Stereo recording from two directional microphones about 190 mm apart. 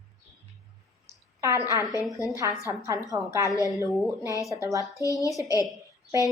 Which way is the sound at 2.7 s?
15° right (ahead or behind).